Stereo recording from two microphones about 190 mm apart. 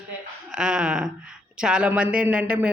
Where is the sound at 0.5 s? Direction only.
5° right (ahead or behind).